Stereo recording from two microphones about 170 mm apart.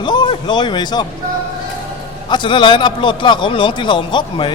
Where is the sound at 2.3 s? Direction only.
25° left (ahead or behind).